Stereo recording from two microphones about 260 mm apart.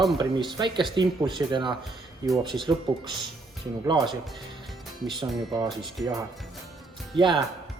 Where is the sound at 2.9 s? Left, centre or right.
Centre.